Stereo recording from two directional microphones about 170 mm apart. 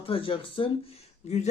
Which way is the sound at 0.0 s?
35° left (ahead or behind).